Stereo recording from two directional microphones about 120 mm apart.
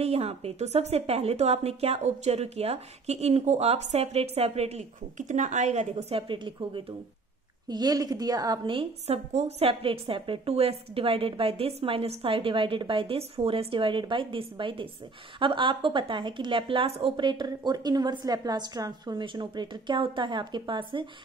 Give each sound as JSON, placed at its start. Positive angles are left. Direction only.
{"t": 0.0, "sound": "a woman's voice", "side_deg": -60}
{"t": 8.7, "sound": "a woman's voice", "side_deg": -60}
{"t": 17.3, "sound": "a woman's voice", "side_deg": -35}